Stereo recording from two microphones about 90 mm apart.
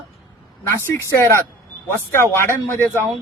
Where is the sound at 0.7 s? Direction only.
30° left (ahead or behind).